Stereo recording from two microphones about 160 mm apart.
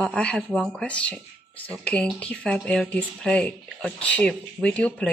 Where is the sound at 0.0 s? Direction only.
5° left (ahead or behind).